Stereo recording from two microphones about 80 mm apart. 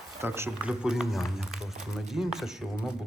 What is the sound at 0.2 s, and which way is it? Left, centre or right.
Speech, right.